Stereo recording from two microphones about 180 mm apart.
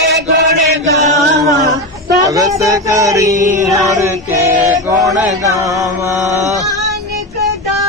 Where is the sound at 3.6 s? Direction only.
20° right (ahead or behind).